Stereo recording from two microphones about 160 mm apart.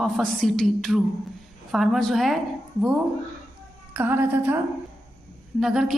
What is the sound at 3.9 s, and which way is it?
Speech, 15° right (ahead or behind).